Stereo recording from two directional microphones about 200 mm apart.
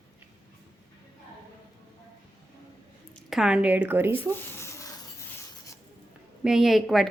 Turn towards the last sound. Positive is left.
turn(degrees=0)  # may be behind; listen again after turning